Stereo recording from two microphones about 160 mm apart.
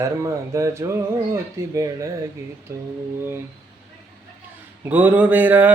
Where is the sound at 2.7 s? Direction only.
20° right (ahead or behind).